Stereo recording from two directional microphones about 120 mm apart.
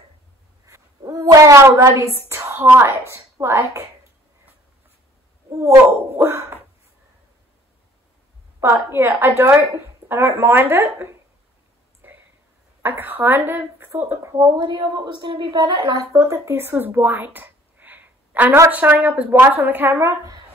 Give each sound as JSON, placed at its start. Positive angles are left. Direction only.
{"t": 0.7, "sound": "a sound", "side_deg": -25}
{"t": 2.0, "sound": "a woman's voice", "side_deg": -25}
{"t": 6.1, "sound": "a woman's voice", "side_deg": -20}
{"t": 8.5, "sound": "a woman's voice", "side_deg": -20}
{"t": 12.8, "sound": "a woman's voice", "side_deg": -15}
{"t": 16.1, "sound": "a woman's voice", "side_deg": -25}